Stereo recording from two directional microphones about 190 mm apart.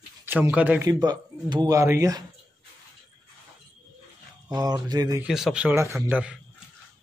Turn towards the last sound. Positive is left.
turn(degrees=-5)  # may be behind; listen again after turning